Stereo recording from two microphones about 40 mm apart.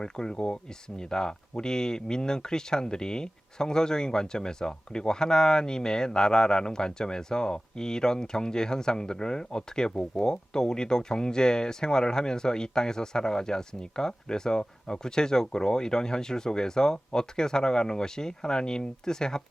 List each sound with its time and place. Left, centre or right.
0.0 s speech: centre